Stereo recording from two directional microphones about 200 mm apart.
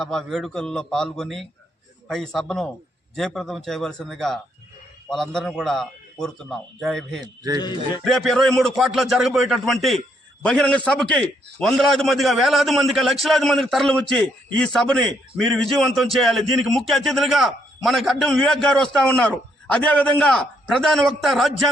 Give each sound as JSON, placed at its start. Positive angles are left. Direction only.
{"t": 0.0, "sound": "a man's voice", "side_deg": 0}
{"t": 7.6, "sound": "a man's voice", "side_deg": 20}
{"t": 8.0, "sound": "a man's voice", "side_deg": 0}